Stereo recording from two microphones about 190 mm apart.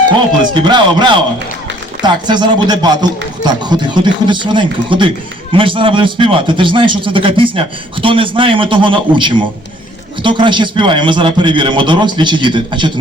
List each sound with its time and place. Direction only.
0.5 s speech: 25° right (ahead or behind)